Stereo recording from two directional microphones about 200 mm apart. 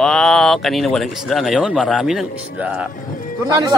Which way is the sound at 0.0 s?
Centre (ahead or behind).